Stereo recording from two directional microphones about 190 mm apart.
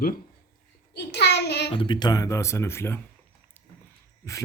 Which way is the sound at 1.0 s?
60° left (ahead or behind).